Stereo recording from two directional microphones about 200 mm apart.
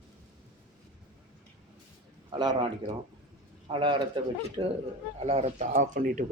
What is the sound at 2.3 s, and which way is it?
Speech, 20° right (ahead or behind).